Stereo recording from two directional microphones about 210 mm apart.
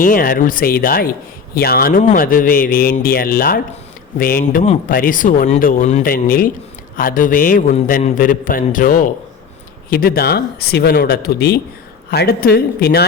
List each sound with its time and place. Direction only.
0.0 s speech: 40° left (ahead or behind)